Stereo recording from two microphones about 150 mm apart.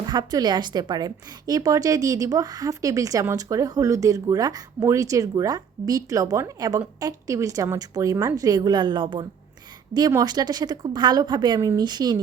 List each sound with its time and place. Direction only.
0.1 s a woman's voice: 25° right (ahead or behind)